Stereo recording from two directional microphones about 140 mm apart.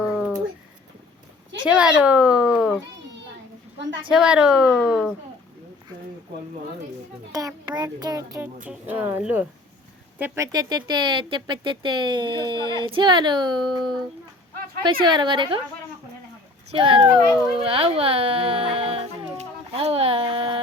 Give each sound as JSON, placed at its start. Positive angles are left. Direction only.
{"t": 0.0, "sound": "a sound", "side_deg": -5}
{"t": 1.6, "sound": "a child's voice", "side_deg": -5}
{"t": 4.1, "sound": "speech", "side_deg": -5}
{"t": 7.3, "sound": "a child's voice", "side_deg": -25}
{"t": 8.6, "sound": "a child's voice", "side_deg": -15}
{"t": 10.4, "sound": "speech", "side_deg": -30}
{"t": 15.0, "sound": "speech", "side_deg": -35}
{"t": 16.7, "sound": "speech", "side_deg": -35}
{"t": 19.4, "sound": "a sound", "side_deg": -45}